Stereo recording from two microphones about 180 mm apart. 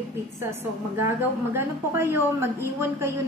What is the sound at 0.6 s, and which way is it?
A woman's voice, 15° right (ahead or behind).